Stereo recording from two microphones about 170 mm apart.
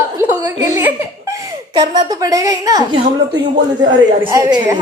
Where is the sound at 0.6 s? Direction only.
10° right (ahead or behind).